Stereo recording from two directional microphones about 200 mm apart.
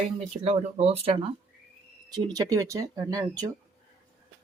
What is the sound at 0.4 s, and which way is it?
Speech, 30° right (ahead or behind).